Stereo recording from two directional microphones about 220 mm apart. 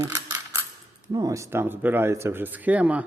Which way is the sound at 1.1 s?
15° right (ahead or behind).